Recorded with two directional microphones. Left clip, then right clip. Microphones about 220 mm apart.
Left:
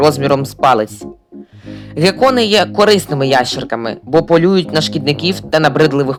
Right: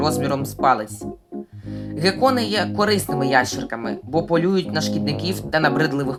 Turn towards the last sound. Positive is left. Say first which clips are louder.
# left 9 dB
turn(degrees=30)  # may be behind; listen again after turning